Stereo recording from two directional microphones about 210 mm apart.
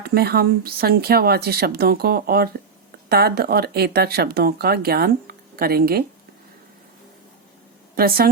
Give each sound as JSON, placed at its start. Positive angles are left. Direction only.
{"t": 0.0, "sound": "speech", "side_deg": -50}
{"t": 7.9, "sound": "speech", "side_deg": -45}